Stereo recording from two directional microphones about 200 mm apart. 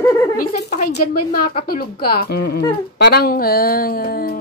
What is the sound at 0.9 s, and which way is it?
Speech, 50° left (ahead or behind).